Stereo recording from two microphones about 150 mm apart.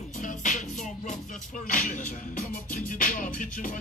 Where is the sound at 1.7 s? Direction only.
60° left (ahead or behind).